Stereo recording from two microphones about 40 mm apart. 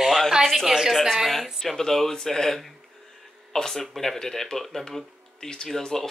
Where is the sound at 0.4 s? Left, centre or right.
Centre.